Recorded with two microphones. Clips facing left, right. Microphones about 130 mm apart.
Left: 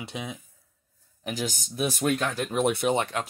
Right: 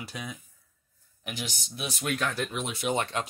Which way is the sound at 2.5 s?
55° left (ahead or behind).